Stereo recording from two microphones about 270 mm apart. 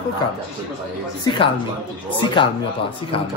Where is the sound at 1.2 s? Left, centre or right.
Centre.